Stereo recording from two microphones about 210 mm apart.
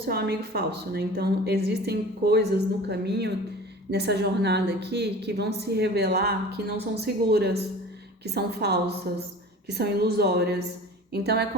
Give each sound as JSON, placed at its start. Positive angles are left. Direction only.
{"t": 0.0, "sound": "a woman's voice", "side_deg": -50}